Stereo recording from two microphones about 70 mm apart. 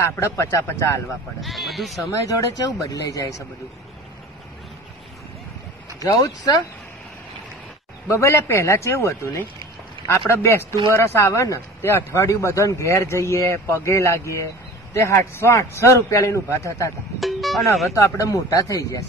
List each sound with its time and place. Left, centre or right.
0.0 s speech: left
1.4 s speech: centre
2.2 s speech: left
5.9 s speech: left
8.1 s speech: left
17.2 s music: centre
17.9 s speech: left